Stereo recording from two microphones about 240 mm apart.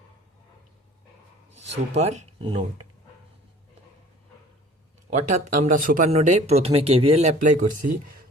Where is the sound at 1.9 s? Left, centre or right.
Right.